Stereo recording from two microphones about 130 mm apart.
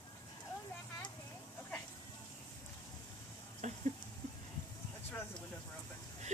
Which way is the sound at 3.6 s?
65° right (ahead or behind).